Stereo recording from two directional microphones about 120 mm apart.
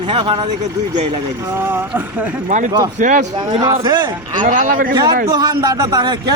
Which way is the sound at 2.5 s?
90° right.